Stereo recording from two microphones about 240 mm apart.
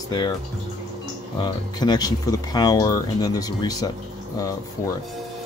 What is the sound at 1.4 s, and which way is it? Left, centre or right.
Speech, centre.